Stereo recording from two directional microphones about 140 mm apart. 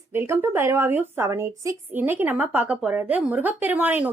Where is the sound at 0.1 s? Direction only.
15° right (ahead or behind).